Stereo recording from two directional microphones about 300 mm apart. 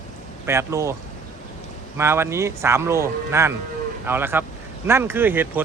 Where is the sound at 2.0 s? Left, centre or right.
Centre.